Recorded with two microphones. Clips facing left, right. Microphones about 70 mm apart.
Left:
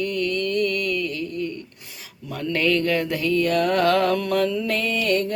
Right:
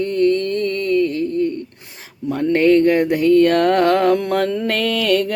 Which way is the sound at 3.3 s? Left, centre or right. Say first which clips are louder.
Right 7 dB; right.